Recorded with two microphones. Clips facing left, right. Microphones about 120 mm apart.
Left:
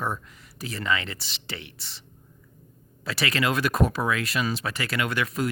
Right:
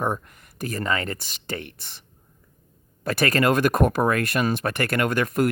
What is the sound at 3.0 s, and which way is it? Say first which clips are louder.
Speech: right 6 dB; 50° right (ahead or behind).